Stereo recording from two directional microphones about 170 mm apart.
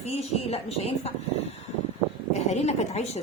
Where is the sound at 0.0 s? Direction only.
40° left (ahead or behind).